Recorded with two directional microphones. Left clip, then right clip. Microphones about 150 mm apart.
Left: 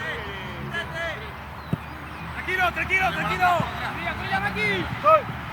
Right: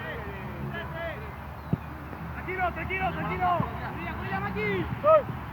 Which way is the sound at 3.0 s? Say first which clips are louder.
Left 3 dB; 10° left (ahead or behind).